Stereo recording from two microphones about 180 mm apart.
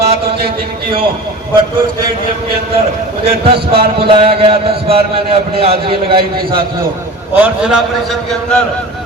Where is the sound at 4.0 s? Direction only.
30° right (ahead or behind).